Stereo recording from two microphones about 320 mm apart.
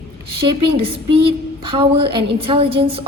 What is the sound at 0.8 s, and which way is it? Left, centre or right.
A woman's voice, centre.